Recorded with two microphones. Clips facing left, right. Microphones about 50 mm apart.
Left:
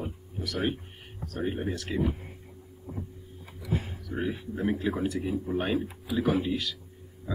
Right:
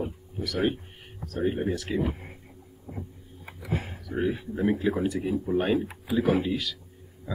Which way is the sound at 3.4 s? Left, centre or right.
Right.